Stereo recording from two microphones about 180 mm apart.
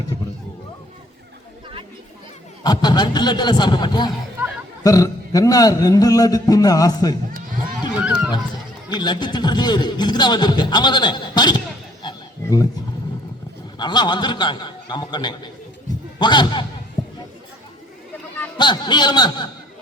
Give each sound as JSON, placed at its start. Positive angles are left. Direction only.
{"t": 2.6, "sound": "a man's voice", "side_deg": 25}
{"t": 7.9, "sound": "run", "side_deg": -5}
{"t": 9.0, "sound": "a man's voice", "side_deg": 25}
{"t": 12.0, "sound": "a sound", "side_deg": 20}
{"t": 13.7, "sound": "a man's voice", "side_deg": 25}
{"t": 17.0, "sound": "a sound", "side_deg": 20}
{"t": 18.5, "sound": "a man's voice", "side_deg": 25}